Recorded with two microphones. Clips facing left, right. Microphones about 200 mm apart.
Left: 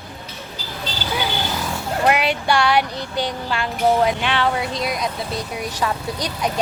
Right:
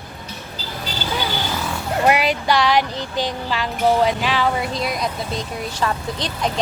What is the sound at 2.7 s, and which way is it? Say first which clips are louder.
Child singing: even; 10° left (ahead or behind).